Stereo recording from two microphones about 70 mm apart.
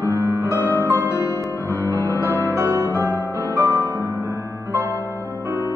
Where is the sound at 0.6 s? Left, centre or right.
Right.